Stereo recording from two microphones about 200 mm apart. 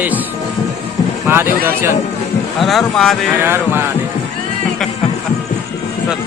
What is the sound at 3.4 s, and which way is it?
Speech, 10° right (ahead or behind).